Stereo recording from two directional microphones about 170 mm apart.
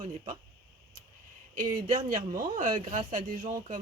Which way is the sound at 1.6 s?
50° right (ahead or behind).